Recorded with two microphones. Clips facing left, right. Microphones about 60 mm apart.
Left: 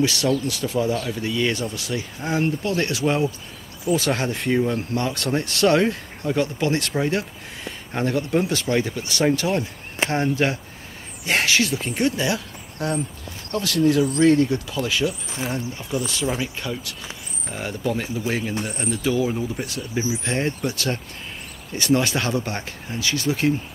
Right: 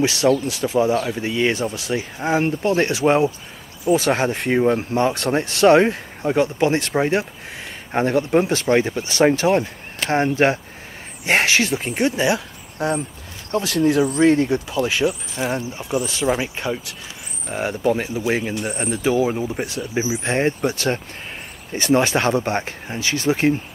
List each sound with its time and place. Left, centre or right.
0.0 s speech: right